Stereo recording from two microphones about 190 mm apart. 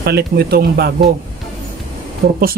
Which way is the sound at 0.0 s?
55° right (ahead or behind).